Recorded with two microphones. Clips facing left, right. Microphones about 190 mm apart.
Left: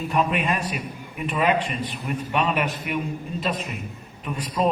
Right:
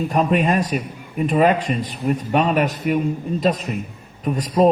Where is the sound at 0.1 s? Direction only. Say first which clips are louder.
Right 4 dB; 40° right (ahead or behind).